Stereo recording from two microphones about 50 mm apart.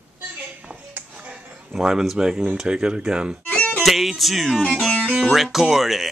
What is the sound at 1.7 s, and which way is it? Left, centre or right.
Speech, centre.